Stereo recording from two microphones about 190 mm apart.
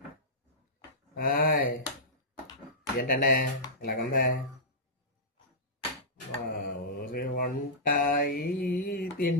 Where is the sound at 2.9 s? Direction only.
50° left (ahead or behind).